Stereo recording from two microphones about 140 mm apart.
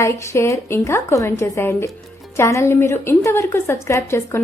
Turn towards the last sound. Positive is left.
turn(degrees=20)  # may be behind; listen again after turning